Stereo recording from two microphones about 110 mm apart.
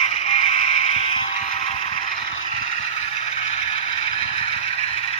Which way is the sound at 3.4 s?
60° left (ahead or behind).